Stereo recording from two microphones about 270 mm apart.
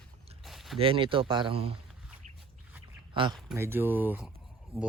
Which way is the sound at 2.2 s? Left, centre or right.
Right.